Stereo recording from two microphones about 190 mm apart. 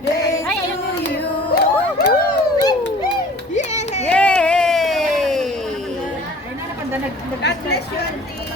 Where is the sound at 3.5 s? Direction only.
35° left (ahead or behind).